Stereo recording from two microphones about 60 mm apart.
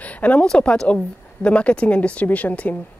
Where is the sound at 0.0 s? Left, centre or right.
Left.